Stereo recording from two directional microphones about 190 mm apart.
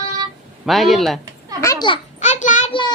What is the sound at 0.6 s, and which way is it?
Speech, centre (ahead or behind).